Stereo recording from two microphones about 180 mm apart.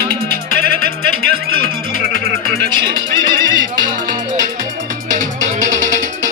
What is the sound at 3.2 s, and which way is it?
Music, 25° right (ahead or behind).